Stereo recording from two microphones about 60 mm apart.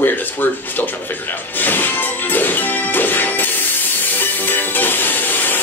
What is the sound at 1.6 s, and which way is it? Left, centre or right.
Music, left.